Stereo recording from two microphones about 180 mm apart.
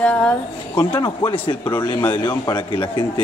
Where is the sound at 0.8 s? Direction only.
25° left (ahead or behind).